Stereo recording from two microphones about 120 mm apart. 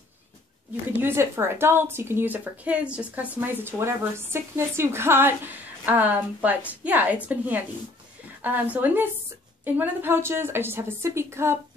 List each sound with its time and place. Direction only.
1.0 s a woman's voice: 20° right (ahead or behind)